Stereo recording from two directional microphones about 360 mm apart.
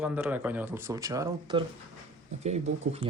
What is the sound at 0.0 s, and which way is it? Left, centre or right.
Speech, centre.